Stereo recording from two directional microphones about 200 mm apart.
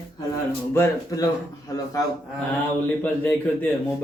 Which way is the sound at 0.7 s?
10° left (ahead or behind).